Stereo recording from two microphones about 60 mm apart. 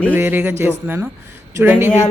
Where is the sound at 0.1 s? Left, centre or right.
Right.